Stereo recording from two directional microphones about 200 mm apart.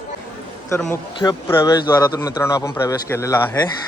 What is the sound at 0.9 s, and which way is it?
A man's voice, 15° left (ahead or behind).